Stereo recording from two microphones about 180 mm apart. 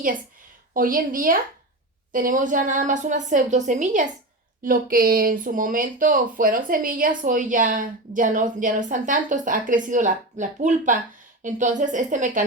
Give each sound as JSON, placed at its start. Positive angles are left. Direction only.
{"t": 0.7, "sound": "speech", "side_deg": -50}